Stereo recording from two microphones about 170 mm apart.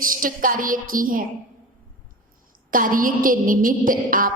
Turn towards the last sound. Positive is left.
turn(degrees=-55)  # may be behind; listen again after turning